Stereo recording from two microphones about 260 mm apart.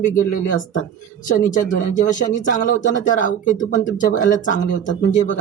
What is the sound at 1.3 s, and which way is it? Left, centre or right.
Speech, left.